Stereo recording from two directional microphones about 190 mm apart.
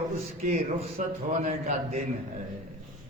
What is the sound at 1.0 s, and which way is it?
A man's voice, 40° right (ahead or behind).